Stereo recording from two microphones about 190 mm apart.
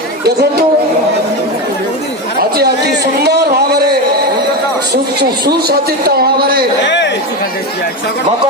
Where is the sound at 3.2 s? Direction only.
60° right (ahead or behind).